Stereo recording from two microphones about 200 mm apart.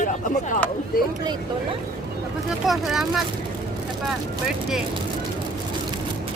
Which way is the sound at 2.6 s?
Centre (ahead or behind).